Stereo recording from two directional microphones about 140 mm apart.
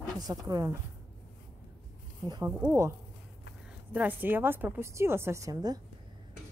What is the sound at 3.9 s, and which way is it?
Speech, 15° right (ahead or behind).